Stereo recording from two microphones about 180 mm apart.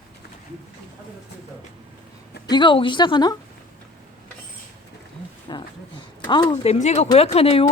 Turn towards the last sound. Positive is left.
turn(degrees=30)  # may be behind; listen again after turning